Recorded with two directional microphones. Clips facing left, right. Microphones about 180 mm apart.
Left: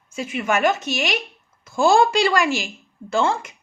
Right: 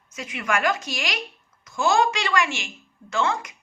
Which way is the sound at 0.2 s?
25° left (ahead or behind).